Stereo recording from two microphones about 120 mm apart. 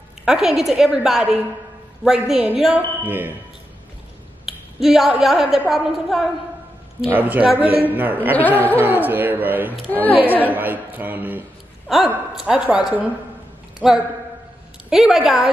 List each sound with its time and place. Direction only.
0.2 s a woman's voice: 5° right (ahead or behind)
3.1 s a woman's voice: 15° right (ahead or behind)
4.5 s finger snapping: centre (ahead or behind)
5.2 s a woman's voice: centre (ahead or behind)
7.2 s a woman's voice: 15° right (ahead or behind)
9.8 s a woman's voice: 15° left (ahead or behind)
10.5 s a woman's voice: 15° right (ahead or behind)
11.9 s a woman's voice: centre (ahead or behind)